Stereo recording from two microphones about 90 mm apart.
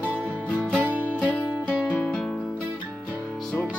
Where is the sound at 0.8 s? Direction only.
20° right (ahead or behind).